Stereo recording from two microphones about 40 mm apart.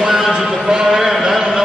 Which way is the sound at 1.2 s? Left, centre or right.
Centre.